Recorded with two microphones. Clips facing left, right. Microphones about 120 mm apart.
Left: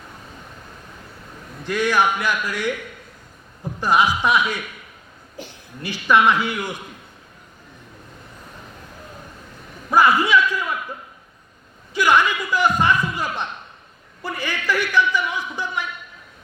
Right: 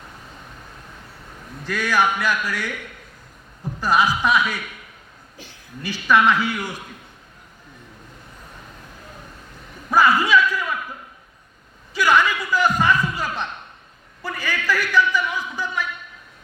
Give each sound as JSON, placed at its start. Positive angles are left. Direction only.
{"t": 1.7, "sound": "speech", "side_deg": 20}
{"t": 3.8, "sound": "speech", "side_deg": 15}
{"t": 5.9, "sound": "speech", "side_deg": 15}
{"t": 9.9, "sound": "a man's voice", "side_deg": 15}
{"t": 12.0, "sound": "speech", "side_deg": 15}